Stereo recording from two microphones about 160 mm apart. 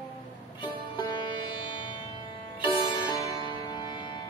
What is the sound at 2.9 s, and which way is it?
Music, 30° left (ahead or behind).